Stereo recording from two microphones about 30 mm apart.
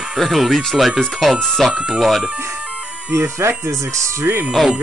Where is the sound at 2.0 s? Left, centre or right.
Centre.